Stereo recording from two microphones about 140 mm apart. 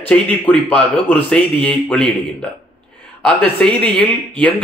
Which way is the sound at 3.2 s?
10° left (ahead or behind).